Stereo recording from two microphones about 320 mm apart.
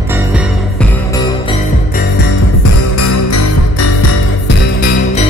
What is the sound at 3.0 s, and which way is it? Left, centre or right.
Music, left.